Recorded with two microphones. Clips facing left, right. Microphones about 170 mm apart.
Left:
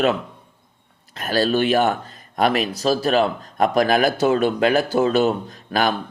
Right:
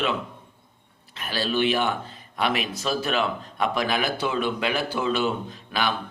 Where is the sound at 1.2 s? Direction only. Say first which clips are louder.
Left 6 dB; 45° left (ahead or behind).